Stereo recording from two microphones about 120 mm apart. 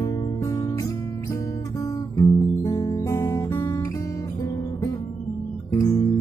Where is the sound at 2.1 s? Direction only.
30° left (ahead or behind).